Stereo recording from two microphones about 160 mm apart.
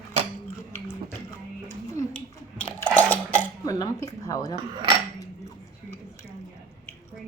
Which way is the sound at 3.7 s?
20° left (ahead or behind).